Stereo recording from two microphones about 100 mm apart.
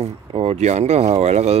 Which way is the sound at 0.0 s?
90° right.